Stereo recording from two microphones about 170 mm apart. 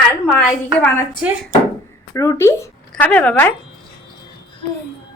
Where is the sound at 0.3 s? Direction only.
10° left (ahead or behind).